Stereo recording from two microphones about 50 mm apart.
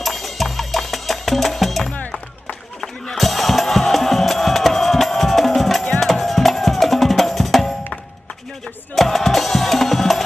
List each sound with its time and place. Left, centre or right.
0.0 s music: centre
1.9 s music: left
2.4 s music: centre